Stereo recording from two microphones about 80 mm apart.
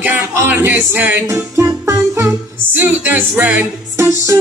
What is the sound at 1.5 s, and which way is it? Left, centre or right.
Music, right.